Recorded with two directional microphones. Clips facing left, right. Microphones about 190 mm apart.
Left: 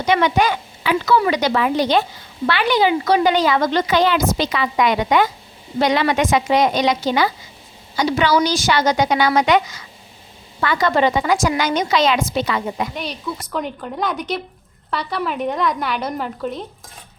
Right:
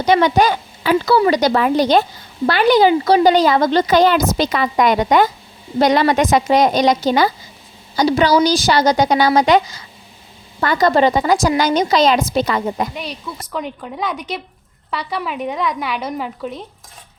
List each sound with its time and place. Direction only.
0.0 s a woman's voice: 35° right (ahead or behind)
13.0 s a woman's voice: centre (ahead or behind)